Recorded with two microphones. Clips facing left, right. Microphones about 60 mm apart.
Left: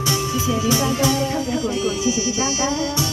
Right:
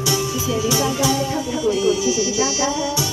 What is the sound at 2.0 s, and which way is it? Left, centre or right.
Music, left.